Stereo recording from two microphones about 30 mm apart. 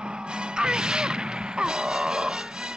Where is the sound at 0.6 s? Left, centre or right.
Right.